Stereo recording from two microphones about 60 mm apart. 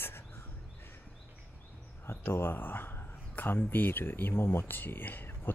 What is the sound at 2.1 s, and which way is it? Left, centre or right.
Speech, left.